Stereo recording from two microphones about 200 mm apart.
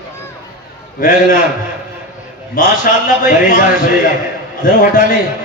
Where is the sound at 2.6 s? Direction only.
45° left (ahead or behind).